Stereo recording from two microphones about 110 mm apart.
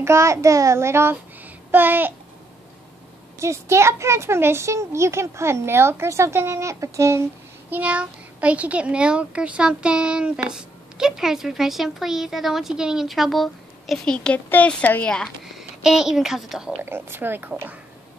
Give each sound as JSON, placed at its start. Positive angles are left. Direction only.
{"t": 0.0, "sound": "speech", "side_deg": -25}
{"t": 3.3, "sound": "speech", "side_deg": -25}
{"t": 7.7, "sound": "a child's voice", "side_deg": -10}
{"t": 15.8, "sound": "a child's voice", "side_deg": -5}
{"t": 16.8, "sound": "speech", "side_deg": -20}